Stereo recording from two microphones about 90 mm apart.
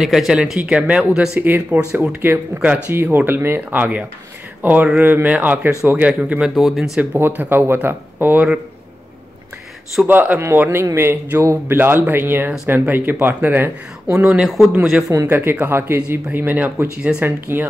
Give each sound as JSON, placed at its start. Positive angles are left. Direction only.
{"t": 0.0, "sound": "speech", "side_deg": -5}
{"t": 1.4, "sound": "speech", "side_deg": -20}
{"t": 6.5, "sound": "speech", "side_deg": -5}
{"t": 7.0, "sound": "speech", "side_deg": -20}
{"t": 10.0, "sound": "speech", "side_deg": -20}
{"t": 15.2, "sound": "speech", "side_deg": -25}
{"t": 17.5, "sound": "speech", "side_deg": -25}